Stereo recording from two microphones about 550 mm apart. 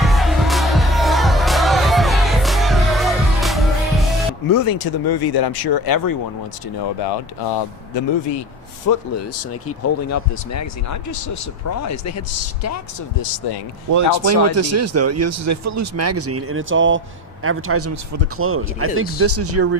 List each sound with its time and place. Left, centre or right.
0.0 s music: centre
4.4 s speech: left
7.9 s speech: left
8.9 s speech: left
13.9 s speech: right